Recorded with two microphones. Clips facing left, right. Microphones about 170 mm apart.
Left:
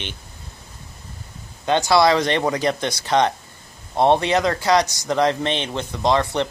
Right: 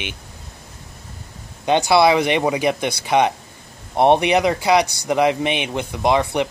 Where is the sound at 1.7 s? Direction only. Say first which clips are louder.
Right 2 dB; 15° right (ahead or behind).